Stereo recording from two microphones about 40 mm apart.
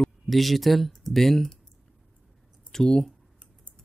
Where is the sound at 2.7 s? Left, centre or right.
Centre.